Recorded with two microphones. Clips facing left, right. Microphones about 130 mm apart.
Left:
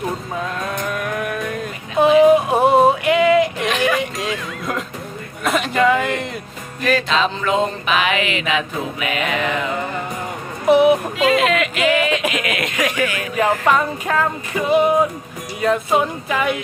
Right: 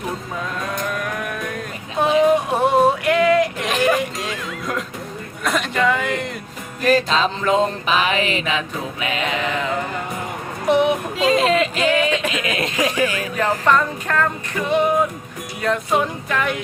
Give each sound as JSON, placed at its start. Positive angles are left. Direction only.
{"t": 0.6, "sound": "a sound", "side_deg": 5}
{"t": 5.4, "sound": "a man's voice", "side_deg": 5}
{"t": 6.8, "sound": "music", "side_deg": -40}
{"t": 9.4, "sound": "music", "side_deg": 15}
{"t": 11.2, "sound": "speech", "side_deg": -35}
{"t": 12.3, "sound": "a sound", "side_deg": -30}
{"t": 13.3, "sound": "music", "side_deg": 10}
{"t": 15.6, "sound": "speech", "side_deg": 5}